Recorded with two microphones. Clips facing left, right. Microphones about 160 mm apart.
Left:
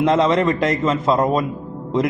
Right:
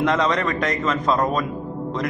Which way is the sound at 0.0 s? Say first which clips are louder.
Left 5 dB; 25° left (ahead or behind).